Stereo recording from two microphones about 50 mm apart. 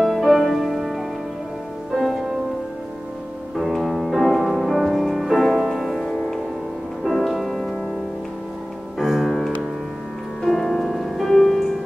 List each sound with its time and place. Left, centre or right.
0.0 s music: centre
3.5 s music: centre
8.9 s music: centre